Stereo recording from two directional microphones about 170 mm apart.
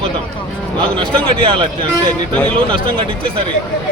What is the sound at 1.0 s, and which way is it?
Speech, 30° right (ahead or behind).